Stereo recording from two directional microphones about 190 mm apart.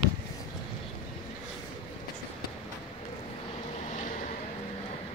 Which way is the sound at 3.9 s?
40° left (ahead or behind).